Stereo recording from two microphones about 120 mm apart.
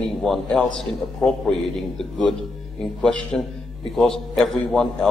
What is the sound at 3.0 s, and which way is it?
A man's voice, 5° left (ahead or behind).